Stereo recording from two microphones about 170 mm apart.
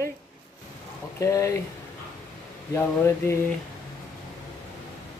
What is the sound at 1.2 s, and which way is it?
Speech, 15° left (ahead or behind).